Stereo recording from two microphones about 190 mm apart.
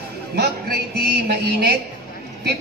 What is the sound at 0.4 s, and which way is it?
Music, 55° right (ahead or behind).